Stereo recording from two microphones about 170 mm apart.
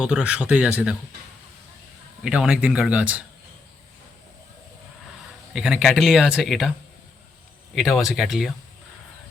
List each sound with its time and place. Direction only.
0.0 s speech: 5° right (ahead or behind)
2.2 s speech: 5° right (ahead or behind)
5.5 s speech: 5° right (ahead or behind)
7.8 s speech: centre (ahead or behind)